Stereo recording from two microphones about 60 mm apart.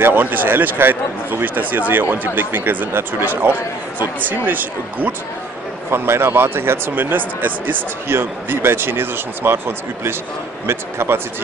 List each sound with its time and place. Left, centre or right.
0.0 s speech: right
4.0 s speech: right
5.9 s a man's voice: right